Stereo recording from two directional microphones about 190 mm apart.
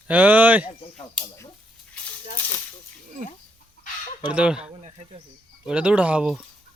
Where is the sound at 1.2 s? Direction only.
15° left (ahead or behind).